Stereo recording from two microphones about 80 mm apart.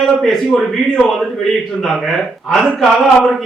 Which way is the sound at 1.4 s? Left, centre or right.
Centre.